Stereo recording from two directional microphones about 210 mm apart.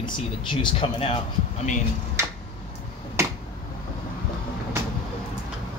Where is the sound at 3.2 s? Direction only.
15° right (ahead or behind).